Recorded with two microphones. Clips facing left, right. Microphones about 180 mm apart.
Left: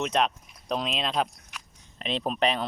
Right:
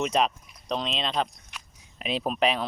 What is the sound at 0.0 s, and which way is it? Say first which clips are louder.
Speech: right 1 dB; centre (ahead or behind).